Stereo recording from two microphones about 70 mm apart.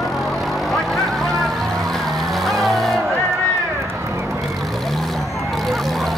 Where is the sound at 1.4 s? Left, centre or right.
Centre.